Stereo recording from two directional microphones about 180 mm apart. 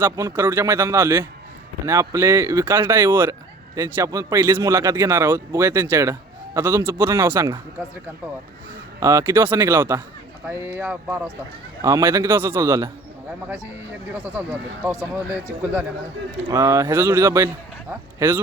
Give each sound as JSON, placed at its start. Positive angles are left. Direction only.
{"t": 0.0, "sound": "a man's voice", "side_deg": -15}
{"t": 9.0, "sound": "a man's voice", "side_deg": -15}
{"t": 14.8, "sound": "a man's voice", "side_deg": -10}